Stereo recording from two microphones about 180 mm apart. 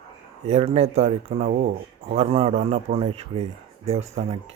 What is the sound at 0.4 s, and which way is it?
A man's voice, 35° right (ahead or behind).